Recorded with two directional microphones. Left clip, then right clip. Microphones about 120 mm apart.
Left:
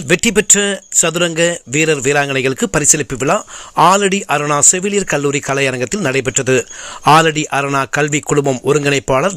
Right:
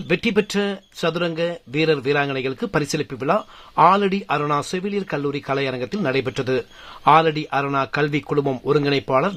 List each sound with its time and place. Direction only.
0.1 s speech: 25° left (ahead or behind)
7.3 s speech: 30° left (ahead or behind)